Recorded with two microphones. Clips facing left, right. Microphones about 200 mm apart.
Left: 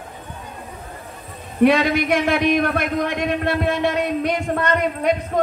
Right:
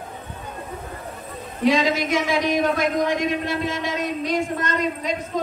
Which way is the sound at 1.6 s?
60° left (ahead or behind).